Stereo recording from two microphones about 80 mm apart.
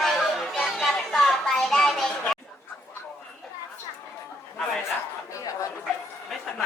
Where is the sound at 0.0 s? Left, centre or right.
Centre.